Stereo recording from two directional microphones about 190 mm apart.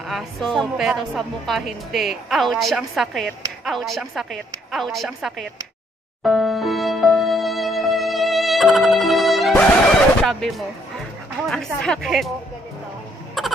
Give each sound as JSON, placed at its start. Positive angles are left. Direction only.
{"t": 0.1, "sound": "a woman's voice", "side_deg": 0}
{"t": 6.2, "sound": "music", "side_deg": 0}
{"t": 11.4, "sound": "a woman's voice", "side_deg": 5}
{"t": 13.4, "sound": "a sound", "side_deg": 0}